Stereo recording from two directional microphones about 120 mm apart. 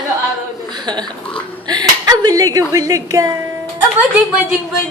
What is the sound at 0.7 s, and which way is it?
A woman's voice, 35° right (ahead or behind).